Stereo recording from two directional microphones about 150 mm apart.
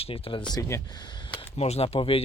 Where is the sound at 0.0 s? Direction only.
35° left (ahead or behind).